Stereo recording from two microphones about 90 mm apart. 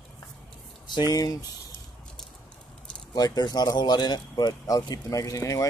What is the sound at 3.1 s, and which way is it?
Speech, 50° left (ahead or behind).